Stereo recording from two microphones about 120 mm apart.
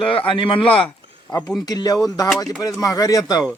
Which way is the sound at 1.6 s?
35° left (ahead or behind).